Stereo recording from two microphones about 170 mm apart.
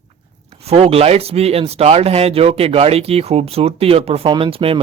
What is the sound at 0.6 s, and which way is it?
Speech, 35° right (ahead or behind).